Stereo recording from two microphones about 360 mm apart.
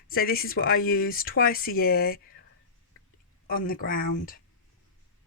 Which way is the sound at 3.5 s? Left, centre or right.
Left.